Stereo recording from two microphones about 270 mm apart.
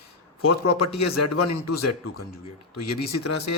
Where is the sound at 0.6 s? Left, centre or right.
Left.